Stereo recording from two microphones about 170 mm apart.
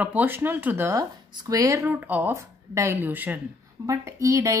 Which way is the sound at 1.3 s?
25° right (ahead or behind).